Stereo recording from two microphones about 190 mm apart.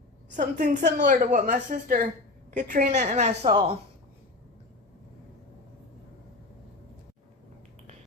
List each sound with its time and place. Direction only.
0.3 s a woman's voice: 40° right (ahead or behind)